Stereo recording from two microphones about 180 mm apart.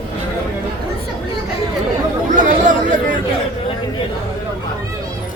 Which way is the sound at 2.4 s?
45° right (ahead or behind).